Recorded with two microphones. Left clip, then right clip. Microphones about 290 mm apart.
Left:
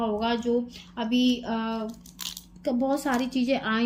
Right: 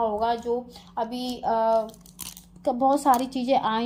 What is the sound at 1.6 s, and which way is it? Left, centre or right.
Speech, centre.